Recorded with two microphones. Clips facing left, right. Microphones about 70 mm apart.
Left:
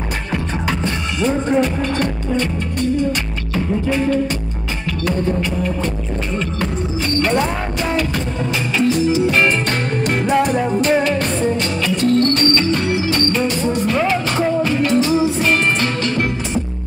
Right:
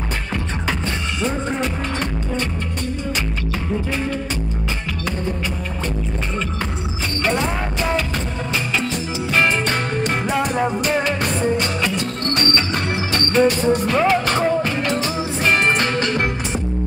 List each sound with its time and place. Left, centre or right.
7.2 s music: centre
8.7 s music: centre
12.2 s music: right
14.6 s music: right